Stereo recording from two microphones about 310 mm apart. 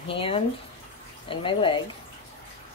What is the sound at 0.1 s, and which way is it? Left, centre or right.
Speech, centre.